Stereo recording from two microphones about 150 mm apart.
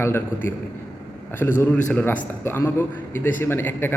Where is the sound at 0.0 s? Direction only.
15° left (ahead or behind).